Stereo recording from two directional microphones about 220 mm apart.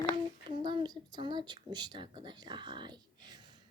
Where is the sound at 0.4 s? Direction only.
20° right (ahead or behind).